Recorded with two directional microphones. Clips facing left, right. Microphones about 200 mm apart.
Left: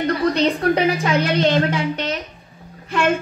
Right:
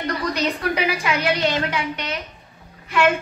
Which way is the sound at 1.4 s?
50° left (ahead or behind).